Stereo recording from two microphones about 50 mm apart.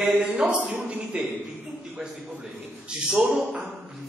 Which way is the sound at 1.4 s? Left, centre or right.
Centre.